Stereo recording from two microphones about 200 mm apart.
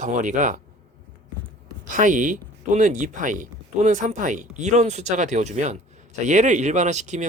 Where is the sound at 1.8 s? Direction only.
40° right (ahead or behind).